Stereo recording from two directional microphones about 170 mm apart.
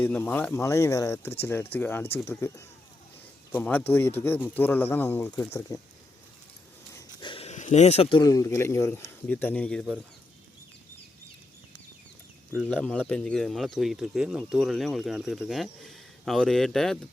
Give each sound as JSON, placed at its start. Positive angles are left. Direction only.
{"t": 0.0, "sound": "speech", "side_deg": 10}
{"t": 7.2, "sound": "a sound", "side_deg": 30}
{"t": 8.2, "sound": "speech", "side_deg": 20}
{"t": 12.5, "sound": "speech", "side_deg": 5}